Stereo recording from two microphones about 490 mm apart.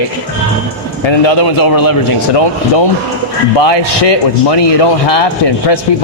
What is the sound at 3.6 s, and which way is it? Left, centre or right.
A man's voice, left.